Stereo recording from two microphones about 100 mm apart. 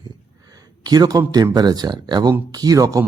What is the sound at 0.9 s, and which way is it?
Speech, 40° right (ahead or behind).